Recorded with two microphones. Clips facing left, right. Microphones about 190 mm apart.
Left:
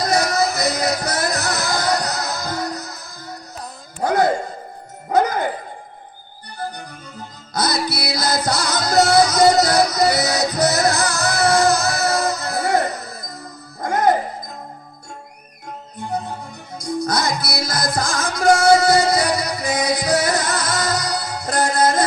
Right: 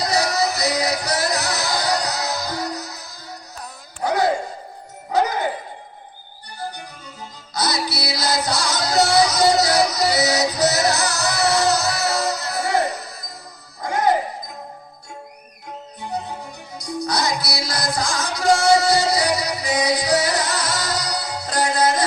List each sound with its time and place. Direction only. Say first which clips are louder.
0.0 s music: left 2 dB; 50° left (ahead or behind)
4.0 s a sound: left 3 dB; 50° left (ahead or behind)
5.0 s music: left 3 dB; 50° left (ahead or behind)
7.5 s music: left 2 dB; 50° left (ahead or behind)
17.1 s music: right 2 dB; 50° left (ahead or behind)